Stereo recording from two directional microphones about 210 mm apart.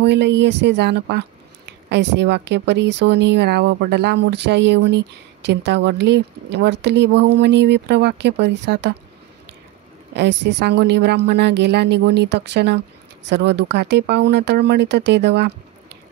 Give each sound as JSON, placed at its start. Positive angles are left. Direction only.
{"t": 0.0, "sound": "speech", "side_deg": -55}
{"t": 10.1, "sound": "a woman's voice", "side_deg": -55}